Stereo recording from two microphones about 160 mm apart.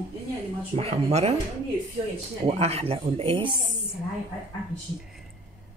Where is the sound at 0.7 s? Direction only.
40° right (ahead or behind).